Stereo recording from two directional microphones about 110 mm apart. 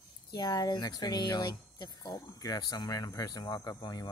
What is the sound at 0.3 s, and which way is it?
Speech, 35° left (ahead or behind).